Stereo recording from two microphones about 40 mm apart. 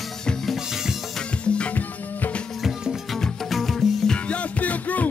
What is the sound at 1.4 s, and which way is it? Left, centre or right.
Music, left.